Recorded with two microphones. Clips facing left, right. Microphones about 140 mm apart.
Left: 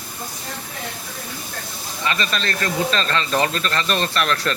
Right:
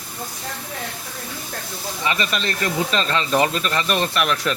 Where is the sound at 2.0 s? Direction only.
15° right (ahead or behind).